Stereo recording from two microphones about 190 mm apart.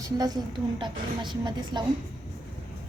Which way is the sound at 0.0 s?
20° right (ahead or behind).